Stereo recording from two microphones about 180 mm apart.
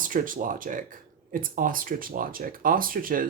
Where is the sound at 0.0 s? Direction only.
50° right (ahead or behind).